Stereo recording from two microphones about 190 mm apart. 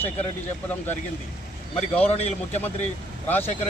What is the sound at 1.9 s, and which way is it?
Speech, 35° left (ahead or behind).